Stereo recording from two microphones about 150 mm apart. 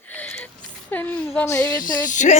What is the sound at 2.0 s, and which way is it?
Speech, 55° left (ahead or behind).